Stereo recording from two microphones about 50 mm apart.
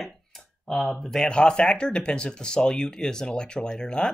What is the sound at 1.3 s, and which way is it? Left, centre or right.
Speech, centre.